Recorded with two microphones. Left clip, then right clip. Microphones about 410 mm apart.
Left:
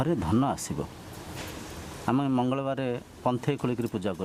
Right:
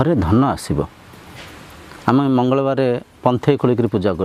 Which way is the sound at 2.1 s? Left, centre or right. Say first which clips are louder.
Right 11 dB; right.